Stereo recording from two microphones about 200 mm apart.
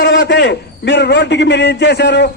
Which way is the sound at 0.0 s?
60° left (ahead or behind).